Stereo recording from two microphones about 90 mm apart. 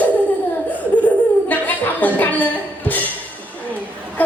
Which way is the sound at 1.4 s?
20° left (ahead or behind).